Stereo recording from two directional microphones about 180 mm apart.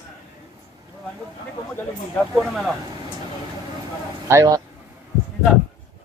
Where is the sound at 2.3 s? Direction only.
Centre (ahead or behind).